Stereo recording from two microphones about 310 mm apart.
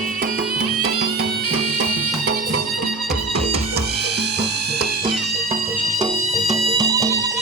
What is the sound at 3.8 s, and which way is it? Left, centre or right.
Music, right.